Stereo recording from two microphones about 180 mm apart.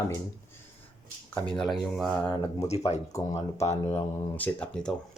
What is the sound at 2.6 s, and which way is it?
Speech, 35° left (ahead or behind).